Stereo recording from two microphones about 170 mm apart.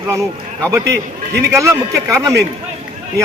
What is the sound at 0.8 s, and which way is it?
Speech, 80° right.